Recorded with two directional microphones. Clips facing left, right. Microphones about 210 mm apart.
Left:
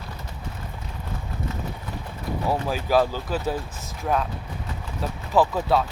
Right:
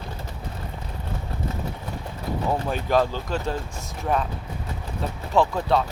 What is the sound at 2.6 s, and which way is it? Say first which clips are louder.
Speech: left 1 dB; 5° left (ahead or behind).